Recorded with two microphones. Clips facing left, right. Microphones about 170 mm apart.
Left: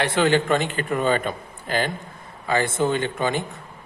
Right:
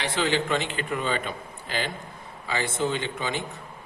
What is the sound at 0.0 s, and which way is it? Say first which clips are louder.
A man's voice: left 6 dB; 55° left (ahead or behind).